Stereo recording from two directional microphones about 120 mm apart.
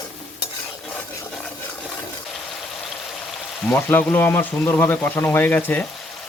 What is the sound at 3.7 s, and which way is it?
Speech, 15° left (ahead or behind).